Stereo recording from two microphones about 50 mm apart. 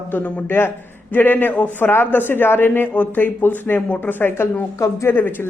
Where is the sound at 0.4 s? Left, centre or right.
Left.